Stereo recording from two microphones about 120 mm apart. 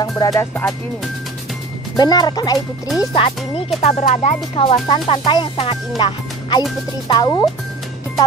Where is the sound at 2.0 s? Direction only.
35° left (ahead or behind).